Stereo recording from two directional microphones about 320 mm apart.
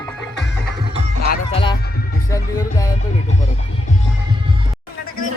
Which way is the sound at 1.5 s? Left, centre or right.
Centre.